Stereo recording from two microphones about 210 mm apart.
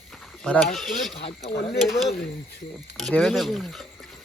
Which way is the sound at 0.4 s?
Centre (ahead or behind).